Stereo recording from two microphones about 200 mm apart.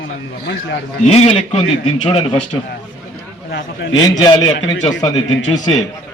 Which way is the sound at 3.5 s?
65° left (ahead or behind).